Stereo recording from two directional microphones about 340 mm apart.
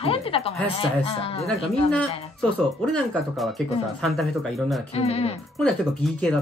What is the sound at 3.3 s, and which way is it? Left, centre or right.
Speech, centre.